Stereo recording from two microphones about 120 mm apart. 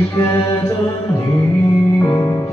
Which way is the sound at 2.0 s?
25° left (ahead or behind).